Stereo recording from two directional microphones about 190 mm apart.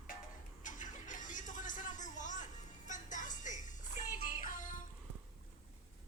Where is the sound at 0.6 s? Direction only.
40° left (ahead or behind).